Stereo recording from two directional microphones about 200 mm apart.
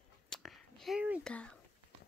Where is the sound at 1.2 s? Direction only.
5° left (ahead or behind).